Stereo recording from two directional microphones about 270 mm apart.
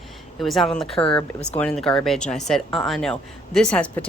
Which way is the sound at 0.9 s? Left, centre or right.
Centre.